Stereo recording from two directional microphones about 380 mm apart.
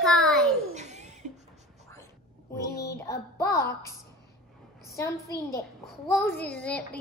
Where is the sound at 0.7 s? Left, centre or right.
Centre.